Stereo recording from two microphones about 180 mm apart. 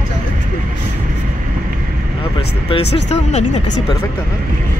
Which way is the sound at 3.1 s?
40° left (ahead or behind).